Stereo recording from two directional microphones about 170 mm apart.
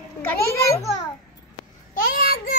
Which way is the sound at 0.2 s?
15° left (ahead or behind).